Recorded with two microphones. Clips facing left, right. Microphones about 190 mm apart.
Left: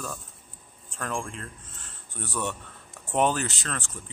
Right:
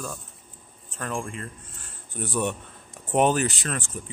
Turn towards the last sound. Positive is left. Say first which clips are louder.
# right 4 dB
turn(degrees=-15)  # may be behind; listen again after turning